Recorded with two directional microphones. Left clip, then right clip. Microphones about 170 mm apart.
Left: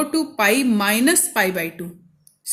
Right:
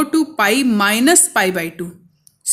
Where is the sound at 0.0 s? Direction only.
35° right (ahead or behind).